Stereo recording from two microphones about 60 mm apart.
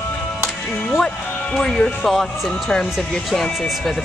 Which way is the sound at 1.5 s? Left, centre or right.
Centre.